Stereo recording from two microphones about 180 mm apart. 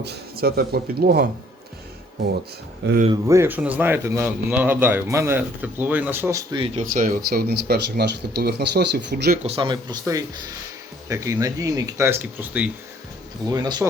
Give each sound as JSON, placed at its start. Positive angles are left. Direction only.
{"t": 0.0, "sound": "speech", "side_deg": -65}
{"t": 3.1, "sound": "speech", "side_deg": -15}
{"t": 6.7, "sound": "speech", "side_deg": -50}
{"t": 9.4, "sound": "speech", "side_deg": -30}
{"t": 13.5, "sound": "speech", "side_deg": -20}